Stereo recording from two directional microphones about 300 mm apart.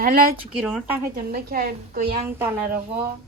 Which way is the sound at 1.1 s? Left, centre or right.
Right.